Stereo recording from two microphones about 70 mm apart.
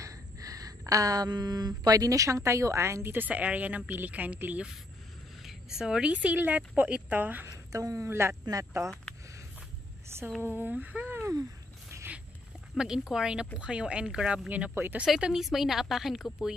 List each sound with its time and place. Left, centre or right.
0.0 s speech: right
3.3 s speech: right
5.4 s speech: centre; by 7.4 s right
7.4 s a woman's voice: right
8.1 s speech: right
8.8 s speech: right
10.4 s speech: right
12.7 s speech: centre
14.5 s speech: right
15.0 s a woman's voice: centre